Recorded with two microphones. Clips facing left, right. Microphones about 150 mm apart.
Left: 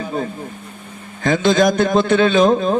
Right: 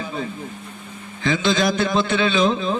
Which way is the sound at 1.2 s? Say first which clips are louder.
Left 5 dB; 50° left (ahead or behind).